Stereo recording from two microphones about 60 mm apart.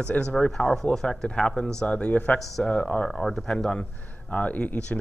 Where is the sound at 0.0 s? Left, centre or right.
Centre.